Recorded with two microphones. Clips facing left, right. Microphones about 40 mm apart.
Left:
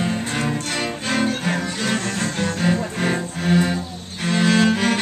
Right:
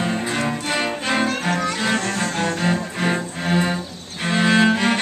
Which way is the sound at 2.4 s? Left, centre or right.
Centre.